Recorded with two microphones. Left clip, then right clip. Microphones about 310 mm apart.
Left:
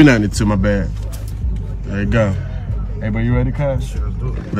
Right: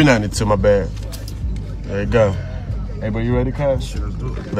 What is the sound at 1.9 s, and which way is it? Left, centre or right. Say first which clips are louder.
Speech: right 2 dB; centre.